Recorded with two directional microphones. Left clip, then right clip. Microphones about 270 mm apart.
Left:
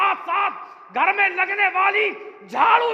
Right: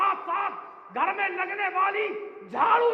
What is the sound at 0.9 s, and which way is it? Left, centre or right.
A man's voice, left.